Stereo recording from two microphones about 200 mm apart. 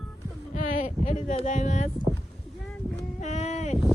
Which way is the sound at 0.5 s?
40° left (ahead or behind).